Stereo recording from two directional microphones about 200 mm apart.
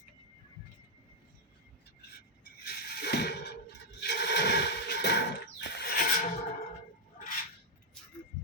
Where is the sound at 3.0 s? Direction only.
55° left (ahead or behind).